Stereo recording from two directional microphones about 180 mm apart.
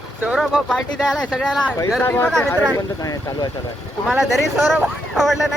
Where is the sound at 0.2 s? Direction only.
5° right (ahead or behind); by 3.5 s 20° left (ahead or behind).